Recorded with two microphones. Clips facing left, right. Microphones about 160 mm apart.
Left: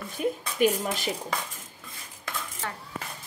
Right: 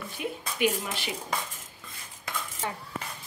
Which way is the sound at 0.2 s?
40° left (ahead or behind).